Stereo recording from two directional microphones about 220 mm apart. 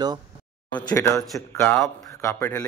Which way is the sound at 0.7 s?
5° left (ahead or behind).